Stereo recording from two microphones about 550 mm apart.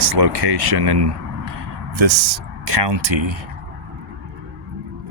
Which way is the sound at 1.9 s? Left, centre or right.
Right.